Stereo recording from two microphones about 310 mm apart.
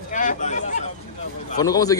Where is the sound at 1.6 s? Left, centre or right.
Centre.